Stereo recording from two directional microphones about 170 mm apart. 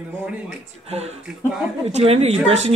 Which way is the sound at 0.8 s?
40° right (ahead or behind).